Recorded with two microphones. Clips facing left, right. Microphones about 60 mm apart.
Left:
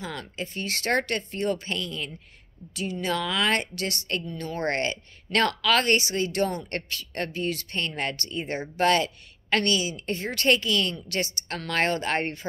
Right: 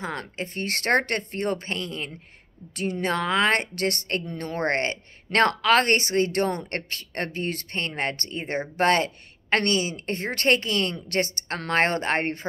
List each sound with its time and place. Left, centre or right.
0.0 s speech: right
2.7 s a woman's voice: right